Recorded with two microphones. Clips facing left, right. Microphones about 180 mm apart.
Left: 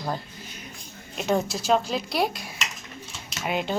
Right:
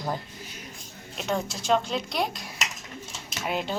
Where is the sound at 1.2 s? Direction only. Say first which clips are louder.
Left 5 dB; 5° left (ahead or behind).